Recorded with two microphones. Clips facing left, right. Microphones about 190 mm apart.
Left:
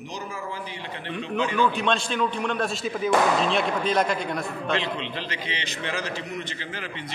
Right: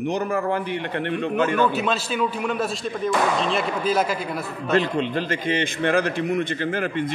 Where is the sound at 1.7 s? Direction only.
5° right (ahead or behind).